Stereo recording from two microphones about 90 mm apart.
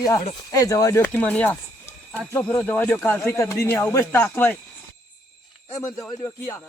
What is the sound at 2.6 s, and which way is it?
Speech, 20° left (ahead or behind).